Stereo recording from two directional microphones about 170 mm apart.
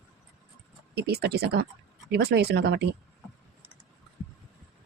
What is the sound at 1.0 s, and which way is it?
Speech, 70° right (ahead or behind).